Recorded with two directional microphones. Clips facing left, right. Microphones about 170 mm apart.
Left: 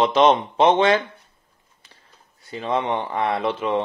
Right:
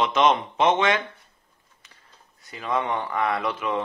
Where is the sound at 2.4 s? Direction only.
30° left (ahead or behind).